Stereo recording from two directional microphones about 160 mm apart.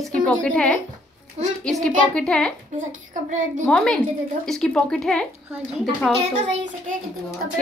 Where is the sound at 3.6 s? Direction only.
5° left (ahead or behind).